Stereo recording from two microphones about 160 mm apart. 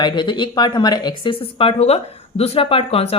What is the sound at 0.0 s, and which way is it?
Speech, 30° left (ahead or behind).